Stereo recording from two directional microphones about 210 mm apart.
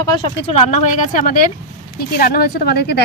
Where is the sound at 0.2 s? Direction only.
30° left (ahead or behind).